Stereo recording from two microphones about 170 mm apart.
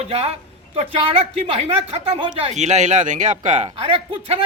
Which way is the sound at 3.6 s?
30° right (ahead or behind).